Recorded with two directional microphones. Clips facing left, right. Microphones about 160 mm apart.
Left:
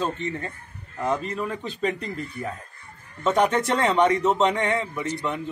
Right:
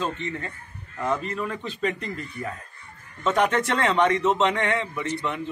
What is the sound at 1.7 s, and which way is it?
Speech, 35° left (ahead or behind).